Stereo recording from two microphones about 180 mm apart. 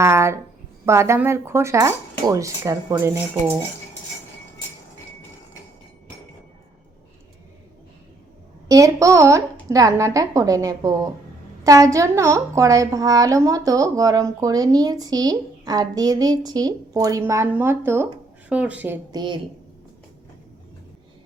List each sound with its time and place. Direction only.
0.0 s speech: 15° right (ahead or behind)
8.6 s a woman's voice: 20° right (ahead or behind)
19.1 s a woman's voice: 25° right (ahead or behind)